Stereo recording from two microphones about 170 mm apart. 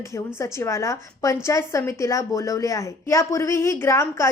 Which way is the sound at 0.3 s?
15° left (ahead or behind).